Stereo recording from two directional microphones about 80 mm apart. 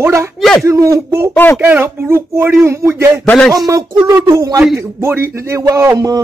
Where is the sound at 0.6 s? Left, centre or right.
Right.